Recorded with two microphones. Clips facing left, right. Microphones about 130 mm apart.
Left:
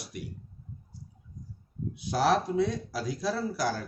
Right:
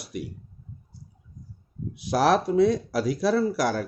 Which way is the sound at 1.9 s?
75° right (ahead or behind).